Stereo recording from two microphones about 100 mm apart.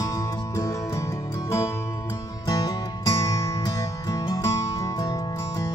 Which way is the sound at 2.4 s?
40° left (ahead or behind).